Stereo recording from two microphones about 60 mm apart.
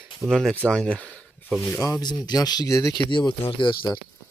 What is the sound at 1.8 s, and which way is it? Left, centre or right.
Speech, left.